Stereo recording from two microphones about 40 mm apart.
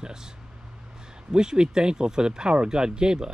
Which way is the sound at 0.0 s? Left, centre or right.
Centre.